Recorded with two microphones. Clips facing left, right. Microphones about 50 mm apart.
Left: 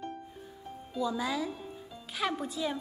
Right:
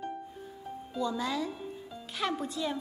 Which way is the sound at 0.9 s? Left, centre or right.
Centre.